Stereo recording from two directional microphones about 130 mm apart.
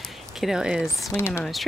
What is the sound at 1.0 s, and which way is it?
Speech, 20° left (ahead or behind).